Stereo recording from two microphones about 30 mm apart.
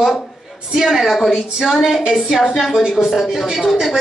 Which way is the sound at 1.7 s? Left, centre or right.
Centre.